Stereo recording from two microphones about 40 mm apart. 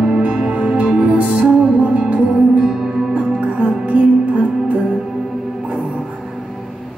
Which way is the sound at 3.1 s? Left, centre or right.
Right.